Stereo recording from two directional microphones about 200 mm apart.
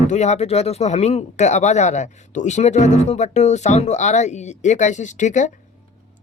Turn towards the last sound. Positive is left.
turn(degrees=35)  # may be behind; listen again after turning